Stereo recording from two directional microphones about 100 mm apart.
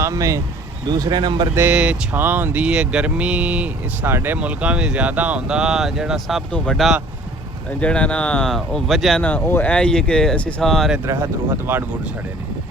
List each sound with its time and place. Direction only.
0.0 s speech: 30° right (ahead or behind)
0.9 s speech: 45° right (ahead or behind)
1.7 s speech: 10° right (ahead or behind)
9.2 s speech: 15° left (ahead or behind)
11.0 s speech: 30° right (ahead or behind)